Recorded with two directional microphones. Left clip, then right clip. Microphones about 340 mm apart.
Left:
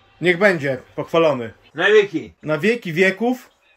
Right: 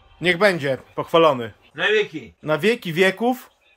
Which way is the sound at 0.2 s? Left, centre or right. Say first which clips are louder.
Left 2 dB; centre.